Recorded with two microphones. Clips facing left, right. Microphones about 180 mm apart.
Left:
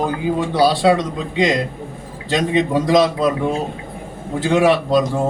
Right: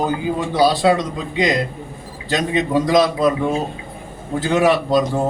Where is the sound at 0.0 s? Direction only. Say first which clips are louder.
Left 1 dB; centre (ahead or behind).